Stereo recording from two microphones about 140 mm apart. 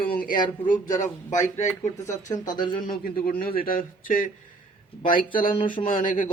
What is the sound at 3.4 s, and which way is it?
Speech, 90° left.